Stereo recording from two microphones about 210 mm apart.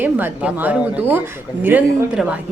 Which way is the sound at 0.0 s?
10° right (ahead or behind).